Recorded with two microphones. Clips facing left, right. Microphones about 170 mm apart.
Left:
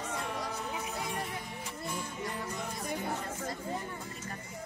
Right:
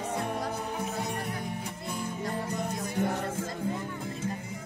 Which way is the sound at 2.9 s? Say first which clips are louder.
Right 7 dB; 75° right (ahead or behind).